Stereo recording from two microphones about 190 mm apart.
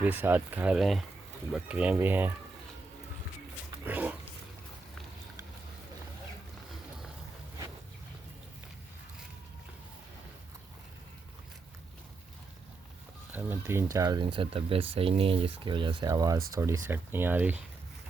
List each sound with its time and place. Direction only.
0.0 s speech: 10° right (ahead or behind)
3.8 s dog: 10° right (ahead or behind)
13.3 s speech: 10° right (ahead or behind)